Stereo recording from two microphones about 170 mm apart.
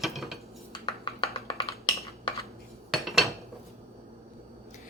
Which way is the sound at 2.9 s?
Centre (ahead or behind).